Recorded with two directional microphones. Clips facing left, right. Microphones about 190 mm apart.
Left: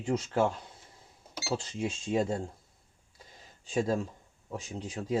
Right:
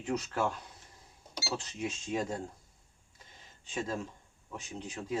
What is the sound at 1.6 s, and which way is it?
Speech, 30° left (ahead or behind).